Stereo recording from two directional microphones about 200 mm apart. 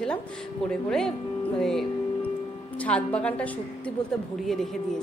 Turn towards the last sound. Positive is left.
turn(degrees=0)  # may be behind; listen again after turning